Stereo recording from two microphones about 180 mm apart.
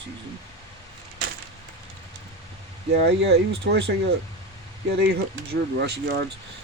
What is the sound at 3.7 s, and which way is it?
Speech, 70° right (ahead or behind).